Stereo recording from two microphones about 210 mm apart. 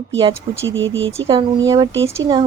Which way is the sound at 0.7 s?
60° right (ahead or behind).